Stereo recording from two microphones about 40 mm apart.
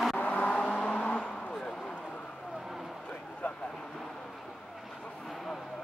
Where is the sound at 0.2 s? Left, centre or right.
Left.